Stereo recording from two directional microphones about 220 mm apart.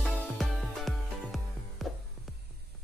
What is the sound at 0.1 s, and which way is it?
Music, centre (ahead or behind).